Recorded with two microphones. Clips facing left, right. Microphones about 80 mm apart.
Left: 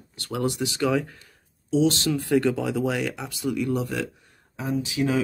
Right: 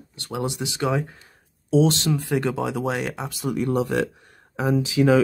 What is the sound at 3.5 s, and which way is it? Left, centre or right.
Speech, right.